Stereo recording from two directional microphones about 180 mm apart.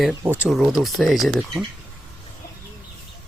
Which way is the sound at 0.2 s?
10° right (ahead or behind).